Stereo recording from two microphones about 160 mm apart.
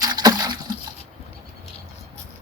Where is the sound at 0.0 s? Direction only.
25° right (ahead or behind).